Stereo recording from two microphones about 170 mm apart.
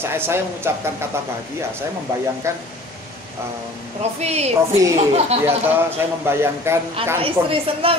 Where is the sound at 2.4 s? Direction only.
15° right (ahead or behind).